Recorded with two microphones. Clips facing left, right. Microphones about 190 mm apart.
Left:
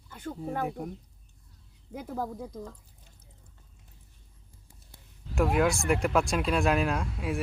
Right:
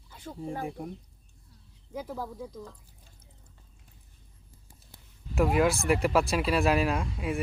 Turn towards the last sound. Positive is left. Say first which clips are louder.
# right 1 dB
turn(degrees=0)  # may be behind; listen again after turning